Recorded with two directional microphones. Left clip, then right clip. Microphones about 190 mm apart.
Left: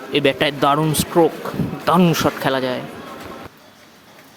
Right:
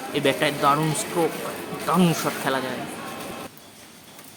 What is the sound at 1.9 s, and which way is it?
Speech, 25° left (ahead or behind).